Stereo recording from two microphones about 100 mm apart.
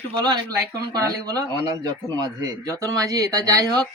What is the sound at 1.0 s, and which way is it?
Speech, 40° right (ahead or behind).